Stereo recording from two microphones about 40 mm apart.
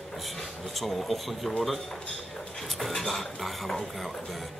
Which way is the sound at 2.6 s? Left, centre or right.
Centre.